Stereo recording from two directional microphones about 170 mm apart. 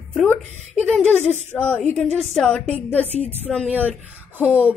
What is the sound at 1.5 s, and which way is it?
A woman's voice, 10° left (ahead or behind).